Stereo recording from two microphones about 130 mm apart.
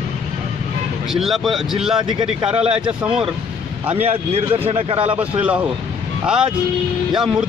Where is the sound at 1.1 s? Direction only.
Centre (ahead or behind).